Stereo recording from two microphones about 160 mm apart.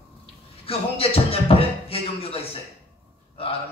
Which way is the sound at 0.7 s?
35° left (ahead or behind).